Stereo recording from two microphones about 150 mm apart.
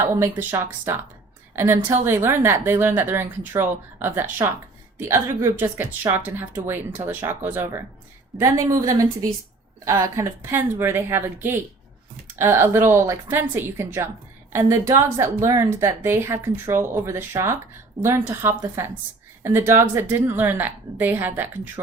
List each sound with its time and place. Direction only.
0.2 s a woman's voice: 15° right (ahead or behind)